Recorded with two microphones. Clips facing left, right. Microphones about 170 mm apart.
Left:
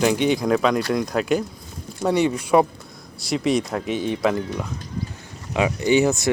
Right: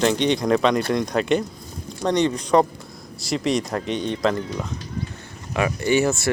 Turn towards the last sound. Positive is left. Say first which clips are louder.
# left 2 dB
turn(degrees=15)  # may be behind; listen again after turning